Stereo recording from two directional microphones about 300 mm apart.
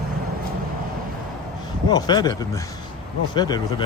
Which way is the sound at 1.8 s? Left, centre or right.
Centre.